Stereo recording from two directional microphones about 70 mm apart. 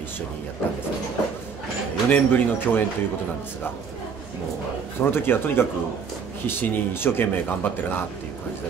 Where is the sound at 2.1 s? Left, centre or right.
Left.